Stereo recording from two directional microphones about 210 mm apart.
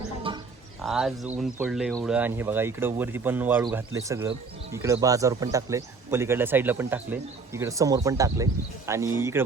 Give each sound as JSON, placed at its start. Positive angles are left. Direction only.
{"t": 0.3, "sound": "bird", "side_deg": -25}
{"t": 0.8, "sound": "speech", "side_deg": 0}
{"t": 2.1, "sound": "a man's voice", "side_deg": -10}